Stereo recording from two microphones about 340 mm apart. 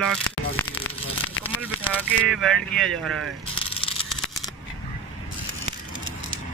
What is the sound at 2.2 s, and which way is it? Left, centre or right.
Speech, centre.